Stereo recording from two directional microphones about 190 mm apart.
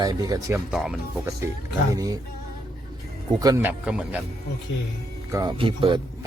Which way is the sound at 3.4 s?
20° right (ahead or behind).